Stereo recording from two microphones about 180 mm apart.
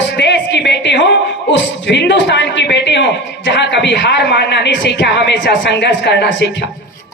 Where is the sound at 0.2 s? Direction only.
75° left (ahead or behind).